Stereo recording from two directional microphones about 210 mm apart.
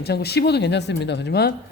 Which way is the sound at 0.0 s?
50° left (ahead or behind).